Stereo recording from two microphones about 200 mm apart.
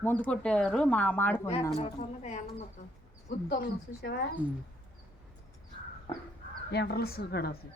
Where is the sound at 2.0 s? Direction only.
35° left (ahead or behind).